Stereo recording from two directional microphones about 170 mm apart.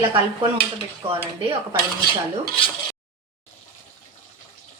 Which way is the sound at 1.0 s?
35° right (ahead or behind).